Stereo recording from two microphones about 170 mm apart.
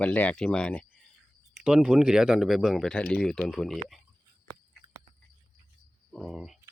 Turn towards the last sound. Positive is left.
turn(degrees=0)  # may be behind; listen again after turning